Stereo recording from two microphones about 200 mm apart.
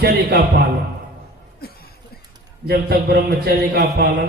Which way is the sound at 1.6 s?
50° left (ahead or behind).